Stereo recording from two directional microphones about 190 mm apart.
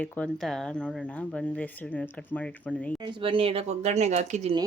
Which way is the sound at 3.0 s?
25° right (ahead or behind).